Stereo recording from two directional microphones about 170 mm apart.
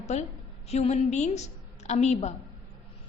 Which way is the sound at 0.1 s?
40° left (ahead or behind).